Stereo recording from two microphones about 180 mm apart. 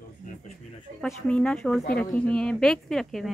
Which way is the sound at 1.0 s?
5° left (ahead or behind).